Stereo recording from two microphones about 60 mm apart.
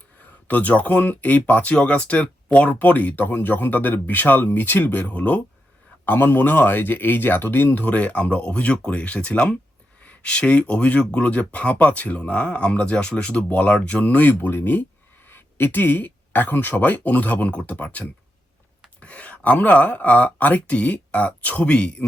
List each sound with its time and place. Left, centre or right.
0.2 s speech: left